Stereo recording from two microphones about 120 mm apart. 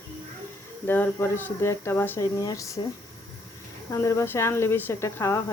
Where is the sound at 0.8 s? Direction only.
15° left (ahead or behind).